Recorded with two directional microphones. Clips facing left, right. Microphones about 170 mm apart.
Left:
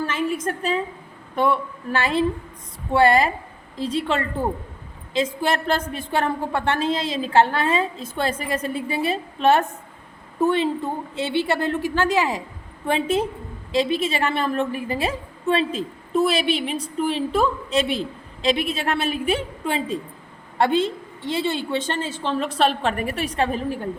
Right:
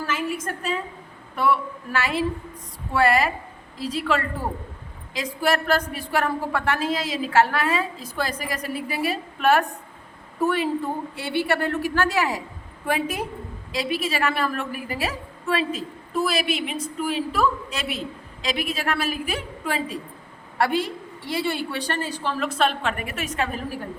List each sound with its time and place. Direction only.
0.4 s a woman's voice: 30° left (ahead or behind)
1.9 s a woman's voice: 30° left (ahead or behind)